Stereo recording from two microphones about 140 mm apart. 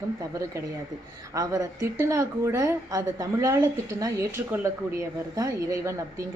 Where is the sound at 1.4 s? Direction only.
25° right (ahead or behind).